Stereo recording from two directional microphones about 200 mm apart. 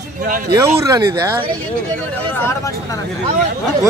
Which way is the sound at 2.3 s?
15° left (ahead or behind).